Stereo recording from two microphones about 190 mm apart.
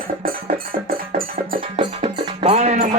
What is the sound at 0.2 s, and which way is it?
Music, 50° right (ahead or behind).